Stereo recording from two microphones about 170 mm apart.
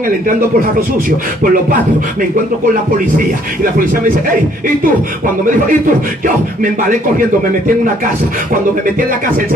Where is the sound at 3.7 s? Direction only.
55° right (ahead or behind).